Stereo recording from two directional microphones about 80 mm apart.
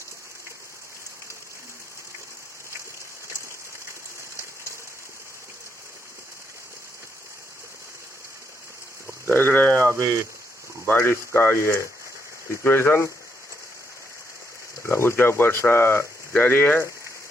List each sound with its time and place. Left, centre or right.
9.3 s speech: left
9.7 s speech: right
11.0 s speech: left
14.8 s speech: left